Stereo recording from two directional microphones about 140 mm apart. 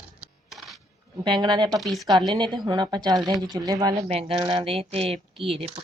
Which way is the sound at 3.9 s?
45° right (ahead or behind).